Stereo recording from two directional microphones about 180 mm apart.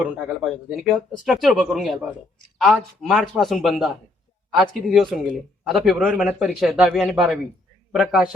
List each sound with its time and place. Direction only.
0.4 s a man's voice: 5° left (ahead or behind)